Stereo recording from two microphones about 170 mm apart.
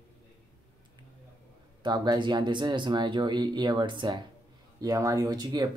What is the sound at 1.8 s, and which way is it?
Speech, 25° right (ahead or behind).